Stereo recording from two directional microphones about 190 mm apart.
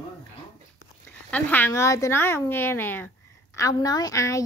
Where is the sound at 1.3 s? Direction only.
10° left (ahead or behind).